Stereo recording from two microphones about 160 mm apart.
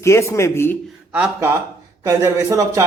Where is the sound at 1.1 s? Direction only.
10° right (ahead or behind).